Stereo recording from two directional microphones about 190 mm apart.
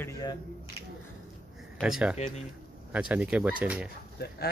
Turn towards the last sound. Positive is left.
turn(degrees=55)  # may be behind; listen again after turning